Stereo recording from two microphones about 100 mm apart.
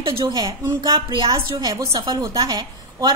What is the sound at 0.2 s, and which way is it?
A woman's voice, 40° right (ahead or behind).